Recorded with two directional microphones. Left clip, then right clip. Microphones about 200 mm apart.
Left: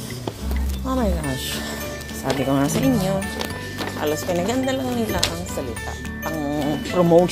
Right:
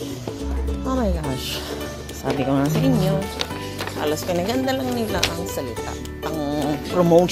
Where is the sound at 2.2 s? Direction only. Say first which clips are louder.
Even; centre (ahead or behind).